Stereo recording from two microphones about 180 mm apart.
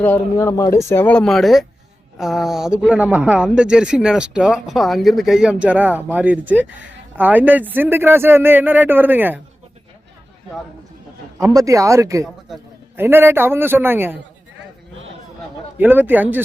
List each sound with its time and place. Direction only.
0.0 s a man's voice: 10° left (ahead or behind); by 9.4 s 10° right (ahead or behind)
11.3 s speech: 20° right (ahead or behind)
15.8 s speech: 10° right (ahead or behind)